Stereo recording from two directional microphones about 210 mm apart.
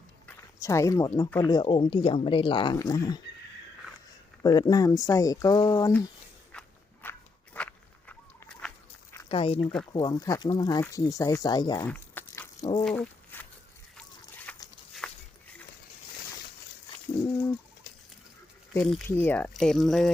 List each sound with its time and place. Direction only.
0.3 s speech: 15° left (ahead or behind)
4.4 s speech: 15° left (ahead or behind)
6.5 s walk: 5° left (ahead or behind)
9.3 s speech: 25° left (ahead or behind)
11.9 s a sound: 10° left (ahead or behind)
18.7 s speech: centre (ahead or behind)